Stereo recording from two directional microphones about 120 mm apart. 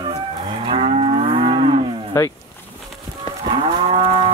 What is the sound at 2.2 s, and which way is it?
Boat, 25° left (ahead or behind).